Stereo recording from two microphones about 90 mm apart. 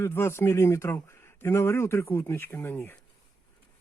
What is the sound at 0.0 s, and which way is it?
Speech, 25° left (ahead or behind).